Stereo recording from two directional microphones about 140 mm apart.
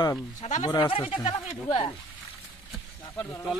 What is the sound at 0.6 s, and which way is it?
Speech, 35° left (ahead or behind).